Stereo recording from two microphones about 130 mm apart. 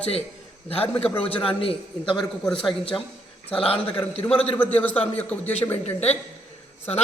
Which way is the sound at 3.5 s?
45° left (ahead or behind).